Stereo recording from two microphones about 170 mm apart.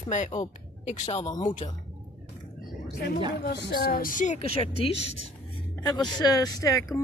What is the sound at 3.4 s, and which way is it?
Speech, 80° left.